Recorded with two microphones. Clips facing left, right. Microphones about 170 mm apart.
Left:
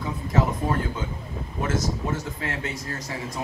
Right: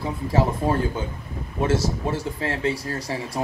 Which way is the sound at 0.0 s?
30° right (ahead or behind).